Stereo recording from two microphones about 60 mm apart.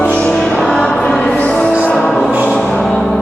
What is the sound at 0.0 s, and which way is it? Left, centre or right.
Music, centre.